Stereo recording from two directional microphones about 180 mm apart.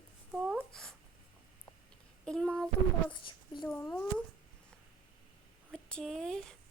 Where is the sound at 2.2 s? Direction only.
5° left (ahead or behind).